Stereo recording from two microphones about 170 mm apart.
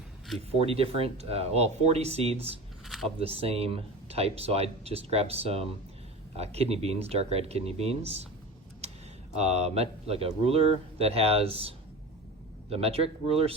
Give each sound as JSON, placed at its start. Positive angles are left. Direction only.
{"t": 0.3, "sound": "speech", "side_deg": -35}
{"t": 2.8, "sound": "a sound", "side_deg": 0}
{"t": 3.2, "sound": "speech", "side_deg": -35}
{"t": 9.3, "sound": "speech", "side_deg": -40}
{"t": 12.7, "sound": "speech", "side_deg": -35}